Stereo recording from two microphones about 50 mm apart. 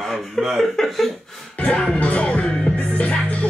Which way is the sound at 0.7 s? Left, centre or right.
Centre.